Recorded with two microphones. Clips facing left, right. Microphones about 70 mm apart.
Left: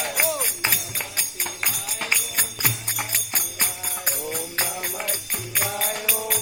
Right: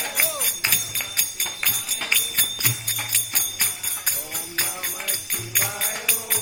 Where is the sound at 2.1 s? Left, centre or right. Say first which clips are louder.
Right 1 dB; centre.